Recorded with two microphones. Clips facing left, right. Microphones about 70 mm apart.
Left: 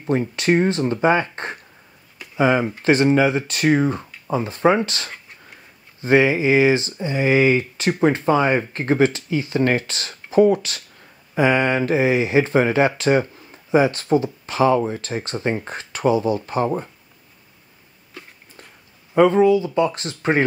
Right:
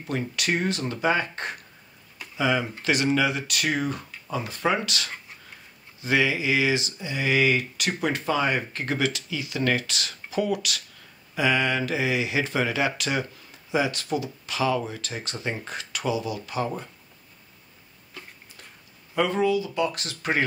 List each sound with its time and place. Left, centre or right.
0.0 s speech: left
19.1 s speech: left